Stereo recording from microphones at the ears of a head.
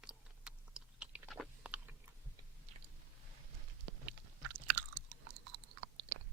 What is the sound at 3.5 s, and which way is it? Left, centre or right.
Chewing, right.